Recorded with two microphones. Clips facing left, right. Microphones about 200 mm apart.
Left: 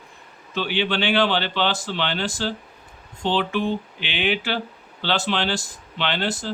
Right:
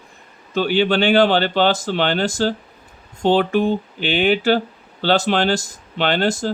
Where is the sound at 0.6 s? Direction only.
45° right (ahead or behind).